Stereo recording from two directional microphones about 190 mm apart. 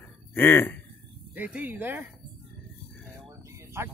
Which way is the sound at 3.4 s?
15° right (ahead or behind).